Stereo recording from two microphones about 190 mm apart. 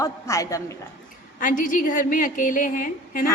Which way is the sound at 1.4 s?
45° left (ahead or behind).